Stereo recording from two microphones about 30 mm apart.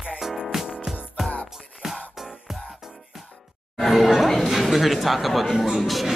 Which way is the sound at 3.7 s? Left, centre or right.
Centre.